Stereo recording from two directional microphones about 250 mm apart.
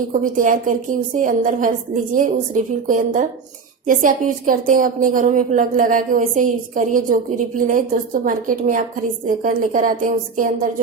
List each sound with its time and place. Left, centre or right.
0.1 s a woman's voice: right